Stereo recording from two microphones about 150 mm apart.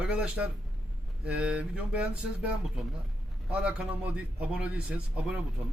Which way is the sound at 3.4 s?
5° right (ahead or behind).